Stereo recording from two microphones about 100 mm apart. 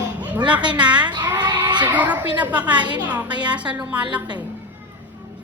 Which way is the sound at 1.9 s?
15° right (ahead or behind).